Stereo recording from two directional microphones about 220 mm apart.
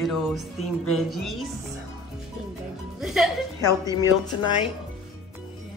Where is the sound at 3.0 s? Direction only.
Centre (ahead or behind).